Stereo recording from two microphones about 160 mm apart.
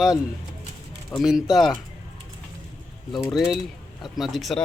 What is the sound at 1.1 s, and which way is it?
Speech, centre (ahead or behind).